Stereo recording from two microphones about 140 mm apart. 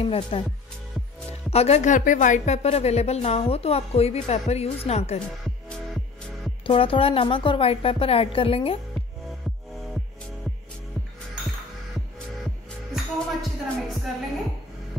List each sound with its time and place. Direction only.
0.0 s a woman's voice: 45° left (ahead or behind)
1.5 s a woman's voice: 50° left (ahead or behind)
6.6 s a woman's voice: 40° left (ahead or behind)
12.9 s music: centre (ahead or behind)